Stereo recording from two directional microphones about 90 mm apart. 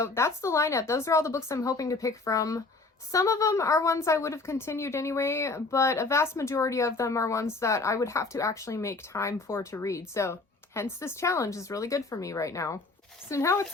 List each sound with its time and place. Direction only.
0.0 s a woman's voice: 30° left (ahead or behind)